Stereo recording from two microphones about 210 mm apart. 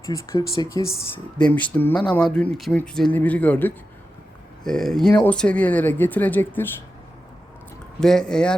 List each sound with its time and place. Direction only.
0.0 s speech: 15° left (ahead or behind)
8.0 s speech: 5° left (ahead or behind)